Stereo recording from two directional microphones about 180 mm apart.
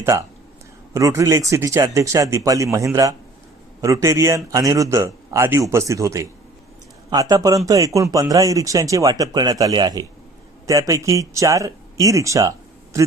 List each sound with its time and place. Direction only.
0.0 s a man's voice: 15° right (ahead or behind)